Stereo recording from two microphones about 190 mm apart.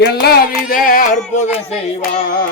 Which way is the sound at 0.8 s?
45° left (ahead or behind).